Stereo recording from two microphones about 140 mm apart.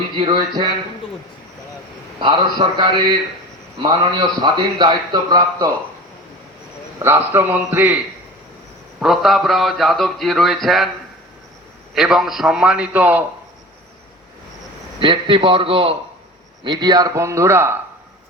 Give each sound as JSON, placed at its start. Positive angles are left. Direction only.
{"t": 0.2, "sound": "a man's voice", "side_deg": -35}
{"t": 2.2, "sound": "a man's voice", "side_deg": -30}
{"t": 4.5, "sound": "a man's voice", "side_deg": -30}
{"t": 7.0, "sound": "a man's voice", "side_deg": -15}
{"t": 9.0, "sound": "speech", "side_deg": 0}
{"t": 11.9, "sound": "speech", "side_deg": 0}
{"t": 14.9, "sound": "a man's voice", "side_deg": -35}